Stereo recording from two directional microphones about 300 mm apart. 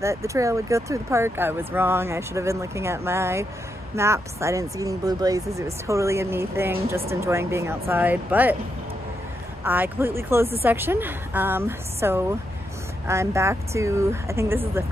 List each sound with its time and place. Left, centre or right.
0.0 s speech: centre
9.7 s speech: centre